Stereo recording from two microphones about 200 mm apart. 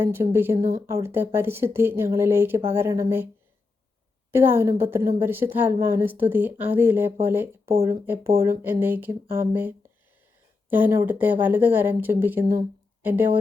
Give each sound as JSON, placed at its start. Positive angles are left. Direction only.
{"t": 0.0, "sound": "speech", "side_deg": -10}
{"t": 4.3, "sound": "speech", "side_deg": -10}